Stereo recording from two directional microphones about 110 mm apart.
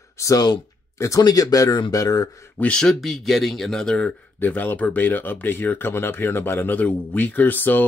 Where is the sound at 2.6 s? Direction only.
10° left (ahead or behind).